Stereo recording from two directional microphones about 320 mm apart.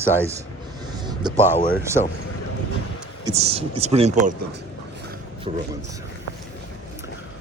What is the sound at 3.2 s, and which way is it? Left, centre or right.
Speech, centre.